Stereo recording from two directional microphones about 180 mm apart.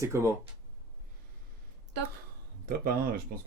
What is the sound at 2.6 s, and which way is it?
Speech, 55° right (ahead or behind).